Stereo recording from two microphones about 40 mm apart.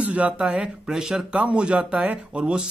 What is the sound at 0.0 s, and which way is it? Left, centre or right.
Speech, right.